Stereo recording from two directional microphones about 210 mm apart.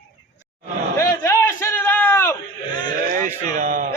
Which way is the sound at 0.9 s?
15° left (ahead or behind).